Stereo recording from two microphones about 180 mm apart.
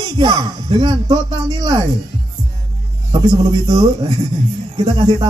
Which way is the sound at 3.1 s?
25° right (ahead or behind).